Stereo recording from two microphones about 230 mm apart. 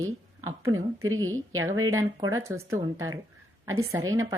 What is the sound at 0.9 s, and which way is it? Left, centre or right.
Speech, right.